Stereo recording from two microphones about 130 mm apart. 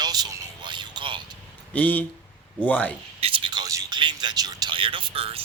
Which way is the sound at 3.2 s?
40° right (ahead or behind).